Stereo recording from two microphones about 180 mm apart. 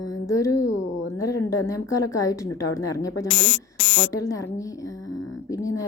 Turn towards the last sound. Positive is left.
turn(degrees=20)  # may be behind; listen again after turning